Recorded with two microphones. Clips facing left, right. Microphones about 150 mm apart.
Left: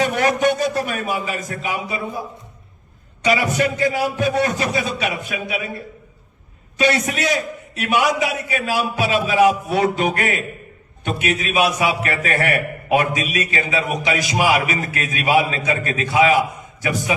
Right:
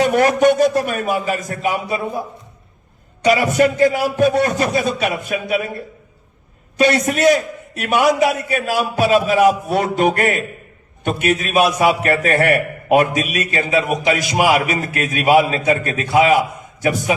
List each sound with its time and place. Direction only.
0.1 s a man's voice: 50° right (ahead or behind)
3.2 s a man's voice: 45° right (ahead or behind)
6.7 s a man's voice: 50° right (ahead or behind)